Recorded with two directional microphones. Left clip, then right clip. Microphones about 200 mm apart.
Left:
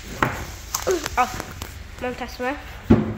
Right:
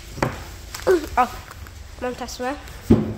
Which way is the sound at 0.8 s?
25° right (ahead or behind).